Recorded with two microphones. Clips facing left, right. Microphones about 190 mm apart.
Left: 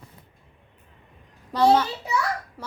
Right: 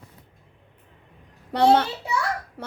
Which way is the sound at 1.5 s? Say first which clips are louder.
Right 1 dB; 65° right (ahead or behind).